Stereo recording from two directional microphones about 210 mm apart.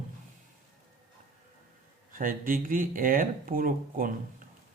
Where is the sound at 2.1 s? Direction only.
40° right (ahead or behind).